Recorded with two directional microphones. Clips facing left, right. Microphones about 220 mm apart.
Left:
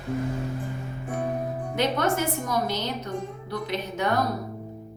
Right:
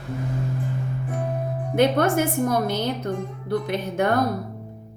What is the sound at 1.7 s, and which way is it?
A woman's voice, 55° right (ahead or behind).